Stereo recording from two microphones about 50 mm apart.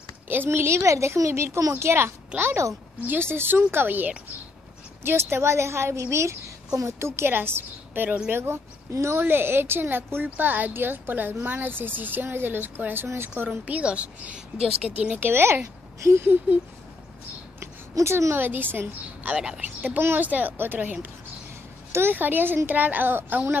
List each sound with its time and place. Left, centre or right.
0.3 s a woman's voice: right
5.0 s a woman's voice: right
7.2 s a woman's voice: right
8.3 s speech: right
13.5 s a woman's voice: right
15.1 s speech: right
16.0 s a sound: right
17.6 s a woman's voice: right
19.3 s speech: centre
20.2 s speech: right
20.8 s a woman's voice: right
21.9 s speech: right